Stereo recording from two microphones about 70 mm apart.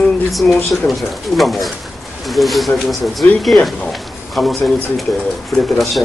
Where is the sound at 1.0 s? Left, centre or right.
Centre.